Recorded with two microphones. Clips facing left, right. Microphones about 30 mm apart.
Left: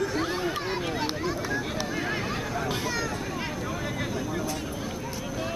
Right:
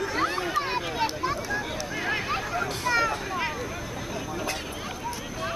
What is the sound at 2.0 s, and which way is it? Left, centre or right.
Hubbub, centre.